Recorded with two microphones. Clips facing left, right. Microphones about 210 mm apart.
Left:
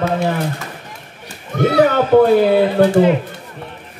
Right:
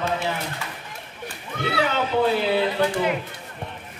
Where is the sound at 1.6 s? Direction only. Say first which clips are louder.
Left 11 dB; 40° left (ahead or behind).